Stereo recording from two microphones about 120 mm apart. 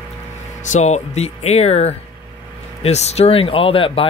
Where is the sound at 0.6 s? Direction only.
75° left (ahead or behind); by 4.0 s 50° left (ahead or behind).